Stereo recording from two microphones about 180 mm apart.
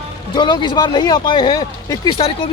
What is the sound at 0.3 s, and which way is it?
Speech, 25° left (ahead or behind).